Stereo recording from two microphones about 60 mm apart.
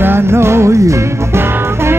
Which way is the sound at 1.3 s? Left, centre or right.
Right.